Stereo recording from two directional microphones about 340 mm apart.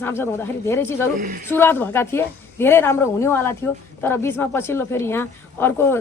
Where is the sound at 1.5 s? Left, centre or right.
Centre.